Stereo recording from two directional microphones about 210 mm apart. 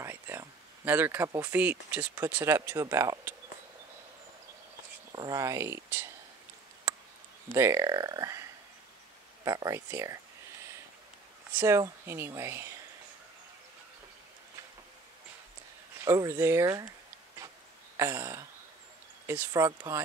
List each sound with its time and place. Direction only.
0.0 s speech: 10° right (ahead or behind)
5.1 s speech: 15° right (ahead or behind)
7.5 s speech: 15° right (ahead or behind)
11.5 s speech: 15° right (ahead or behind)
16.0 s speech: 15° right (ahead or behind)
17.9 s speech: 15° right (ahead or behind)